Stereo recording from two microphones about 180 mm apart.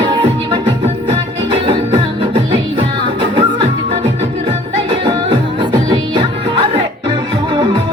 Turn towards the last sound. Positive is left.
turn(degrees=-25)  # may be behind; listen again after turning